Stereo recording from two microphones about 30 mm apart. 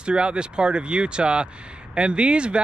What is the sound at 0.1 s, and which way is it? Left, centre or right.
Speech, right.